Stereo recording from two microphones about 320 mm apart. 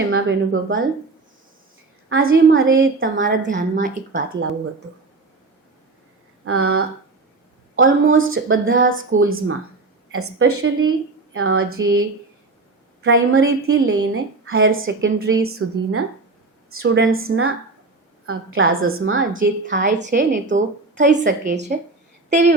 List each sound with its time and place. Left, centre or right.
0.1 s speech: right
2.0 s a woman's voice: right
3.2 s a woman's voice: right
6.4 s a woman's voice: right
11.8 s speech: centre
13.1 s a woman's voice: right
19.9 s a woman's voice: right
22.3 s a woman's voice: right